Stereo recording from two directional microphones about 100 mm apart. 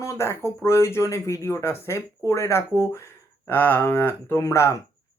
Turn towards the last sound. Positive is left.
turn(degrees=30)  # may be behind; listen again after turning